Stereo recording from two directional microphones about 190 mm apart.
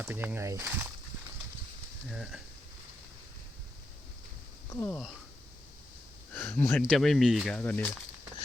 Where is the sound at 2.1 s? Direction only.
5° right (ahead or behind).